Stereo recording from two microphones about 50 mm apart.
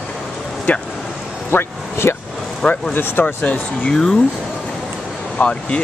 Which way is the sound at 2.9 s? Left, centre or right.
Left.